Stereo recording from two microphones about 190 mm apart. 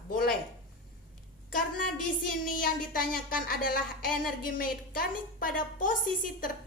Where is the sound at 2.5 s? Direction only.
50° left (ahead or behind).